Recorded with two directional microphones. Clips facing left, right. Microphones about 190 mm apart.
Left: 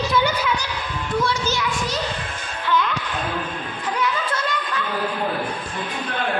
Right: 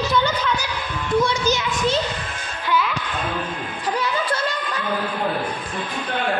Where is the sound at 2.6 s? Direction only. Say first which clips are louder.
Even; 5° right (ahead or behind).